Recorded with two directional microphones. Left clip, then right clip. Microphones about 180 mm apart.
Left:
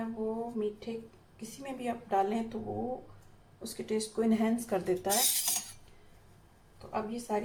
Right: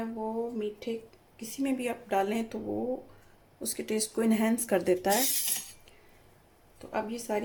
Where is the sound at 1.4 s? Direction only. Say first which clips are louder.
Right 8 dB; 60° right (ahead or behind).